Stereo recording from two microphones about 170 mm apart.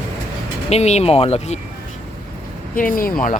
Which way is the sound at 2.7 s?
55° left (ahead or behind).